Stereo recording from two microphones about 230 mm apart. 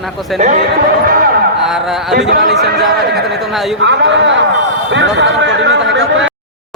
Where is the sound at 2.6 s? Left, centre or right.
Right.